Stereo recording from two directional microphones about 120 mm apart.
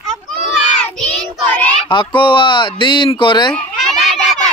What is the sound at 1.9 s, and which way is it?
A man's voice, 45° left (ahead or behind).